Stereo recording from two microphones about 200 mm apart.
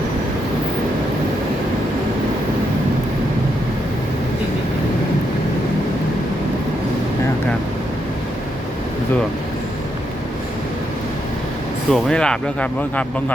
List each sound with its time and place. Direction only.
11.9 s speech: 5° left (ahead or behind)